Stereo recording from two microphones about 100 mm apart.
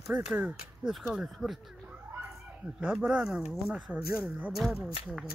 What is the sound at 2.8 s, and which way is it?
Speech, 10° right (ahead or behind).